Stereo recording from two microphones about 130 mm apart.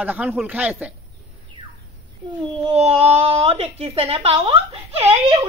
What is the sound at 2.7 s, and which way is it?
Speech, 50° right (ahead or behind).